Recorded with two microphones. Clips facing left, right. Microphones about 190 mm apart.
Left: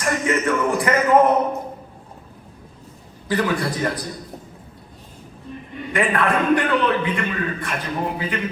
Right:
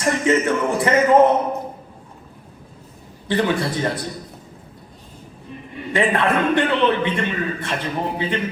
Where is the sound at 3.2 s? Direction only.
25° right (ahead or behind).